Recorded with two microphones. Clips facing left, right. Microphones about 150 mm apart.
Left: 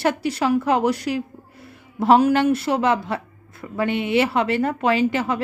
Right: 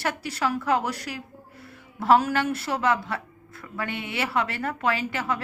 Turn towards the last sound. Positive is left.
turn(degrees=20)  # may be behind; listen again after turning